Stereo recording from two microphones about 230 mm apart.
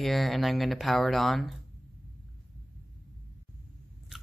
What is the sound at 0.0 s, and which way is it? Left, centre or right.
Speech, centre.